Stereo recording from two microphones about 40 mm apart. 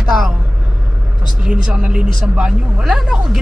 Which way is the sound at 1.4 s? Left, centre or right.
Right.